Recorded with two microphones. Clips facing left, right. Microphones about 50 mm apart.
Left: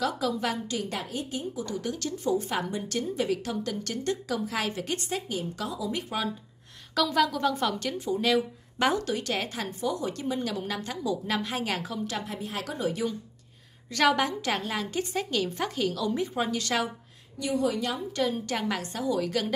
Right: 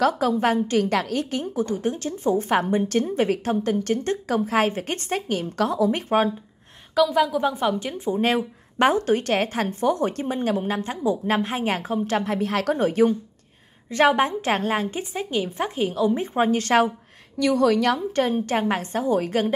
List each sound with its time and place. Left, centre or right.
0.0 s a woman's voice: right
7.0 s a woman's voice: centre; by 13.1 s right
13.8 s a woman's voice: right
15.0 s a woman's voice: right
17.4 s a woman's voice: right
18.1 s a woman's voice: right